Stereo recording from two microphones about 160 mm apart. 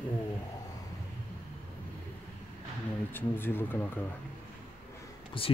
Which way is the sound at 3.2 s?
15° left (ahead or behind).